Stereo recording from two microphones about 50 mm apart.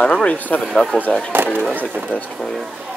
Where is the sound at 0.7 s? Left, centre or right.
Centre.